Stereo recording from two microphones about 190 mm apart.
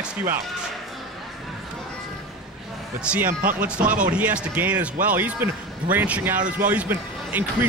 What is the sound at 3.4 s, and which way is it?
Speech, 45° right (ahead or behind).